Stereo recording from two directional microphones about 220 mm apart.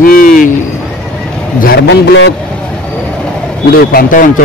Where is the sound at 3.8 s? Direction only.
40° left (ahead or behind).